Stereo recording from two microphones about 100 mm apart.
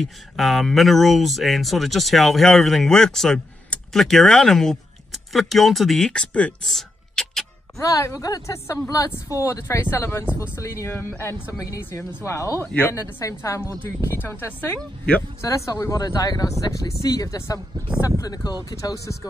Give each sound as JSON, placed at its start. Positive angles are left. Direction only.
{"t": 0.0, "sound": "speech", "side_deg": 0}
{"t": 7.7, "sound": "speech", "side_deg": 30}
{"t": 11.5, "sound": "speech", "side_deg": 35}
{"t": 15.4, "sound": "speech", "side_deg": 35}